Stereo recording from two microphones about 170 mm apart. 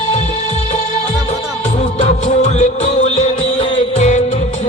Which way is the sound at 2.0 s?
40° left (ahead or behind).